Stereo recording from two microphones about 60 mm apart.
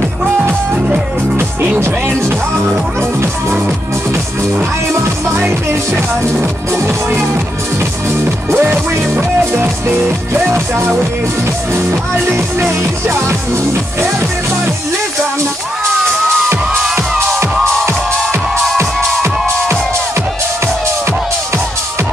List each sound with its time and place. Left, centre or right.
3.0 s music: right
8.5 s music: right
9.4 s music: right
12.3 s music: right
18.9 s music: centre